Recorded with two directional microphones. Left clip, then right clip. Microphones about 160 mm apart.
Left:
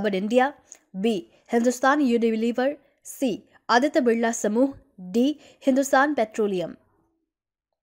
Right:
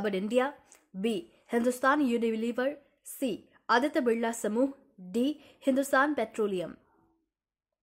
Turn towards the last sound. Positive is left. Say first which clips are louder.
# left 6 dB
turn(degrees=35)  # may be behind; listen again after turning